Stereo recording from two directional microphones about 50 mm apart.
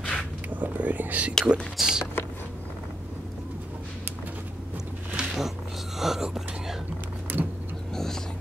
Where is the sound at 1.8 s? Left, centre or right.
Centre.